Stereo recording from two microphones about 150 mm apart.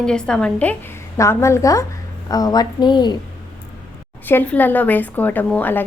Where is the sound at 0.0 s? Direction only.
5° left (ahead or behind); by 3.2 s 30° left (ahead or behind).